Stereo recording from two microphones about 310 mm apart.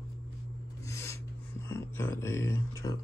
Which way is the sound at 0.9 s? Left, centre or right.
Centre.